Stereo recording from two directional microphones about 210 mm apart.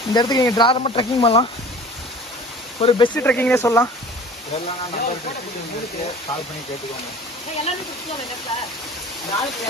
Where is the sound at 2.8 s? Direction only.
25° left (ahead or behind).